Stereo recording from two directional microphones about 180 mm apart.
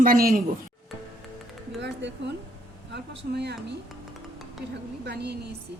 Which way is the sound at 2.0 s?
75° right (ahead or behind).